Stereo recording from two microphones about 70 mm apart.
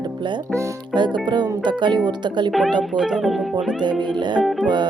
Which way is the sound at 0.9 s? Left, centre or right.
Right.